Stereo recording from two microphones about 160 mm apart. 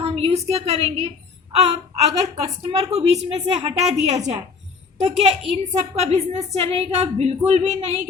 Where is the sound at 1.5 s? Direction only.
40° right (ahead or behind).